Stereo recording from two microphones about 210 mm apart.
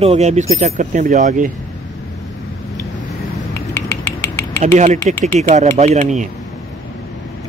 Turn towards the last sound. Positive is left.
turn(degrees=-35)  # may be behind; listen again after turning